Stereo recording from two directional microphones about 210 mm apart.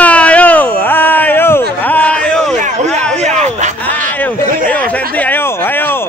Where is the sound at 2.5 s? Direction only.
35° right (ahead or behind).